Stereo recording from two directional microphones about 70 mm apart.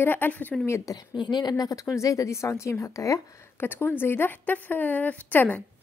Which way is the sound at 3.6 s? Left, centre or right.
Left.